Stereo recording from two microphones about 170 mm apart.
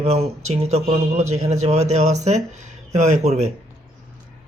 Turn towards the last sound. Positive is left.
turn(degrees=-40)  # may be behind; listen again after turning